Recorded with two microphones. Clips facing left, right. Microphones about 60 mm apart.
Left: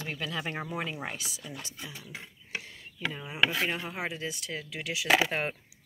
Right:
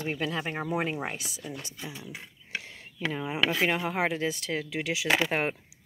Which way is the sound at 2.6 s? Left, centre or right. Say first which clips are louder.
Right 4 dB; right.